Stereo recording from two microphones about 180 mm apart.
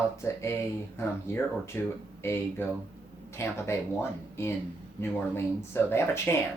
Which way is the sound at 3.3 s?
15° left (ahead or behind).